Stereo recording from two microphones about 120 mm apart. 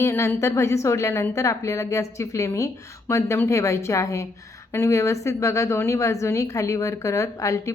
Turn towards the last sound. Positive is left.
turn(degrees=25)  # may be behind; listen again after turning